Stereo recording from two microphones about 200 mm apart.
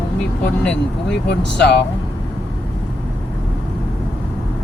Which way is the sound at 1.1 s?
60° left (ahead or behind).